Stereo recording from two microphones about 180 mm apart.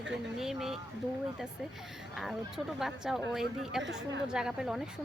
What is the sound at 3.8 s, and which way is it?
Speech, 80° right.